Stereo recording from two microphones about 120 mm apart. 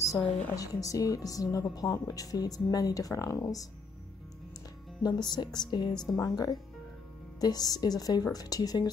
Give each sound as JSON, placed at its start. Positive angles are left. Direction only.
{"t": 0.6, "sound": "a woman's voice", "side_deg": 30}
{"t": 5.0, "sound": "a woman's voice", "side_deg": 35}